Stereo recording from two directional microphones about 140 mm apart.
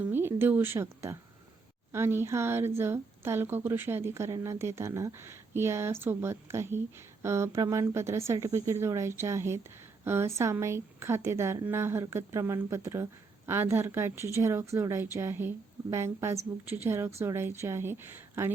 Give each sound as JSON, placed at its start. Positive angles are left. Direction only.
{"t": 0.0, "sound": "a woman's voice", "side_deg": -15}